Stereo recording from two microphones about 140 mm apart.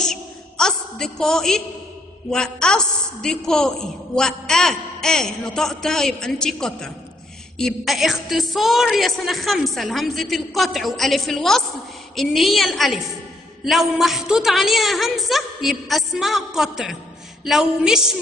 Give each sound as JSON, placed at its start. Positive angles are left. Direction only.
{"t": 0.0, "sound": "a woman's voice", "side_deg": 5}